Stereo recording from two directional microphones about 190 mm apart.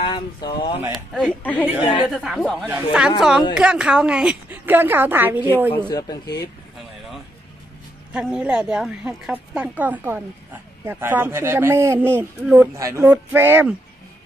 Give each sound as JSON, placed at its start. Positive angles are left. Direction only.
{"t": 0.0, "sound": "speech", "side_deg": 25}
{"t": 0.9, "sound": "a woman's voice", "side_deg": 0}
{"t": 5.7, "sound": "speech", "side_deg": 20}
{"t": 8.1, "sound": "a woman's voice", "side_deg": -5}